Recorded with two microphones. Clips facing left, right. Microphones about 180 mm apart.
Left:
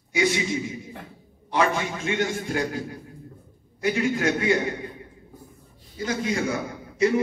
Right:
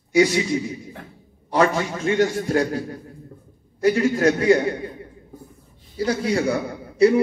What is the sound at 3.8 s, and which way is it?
Speech, 35° right (ahead or behind).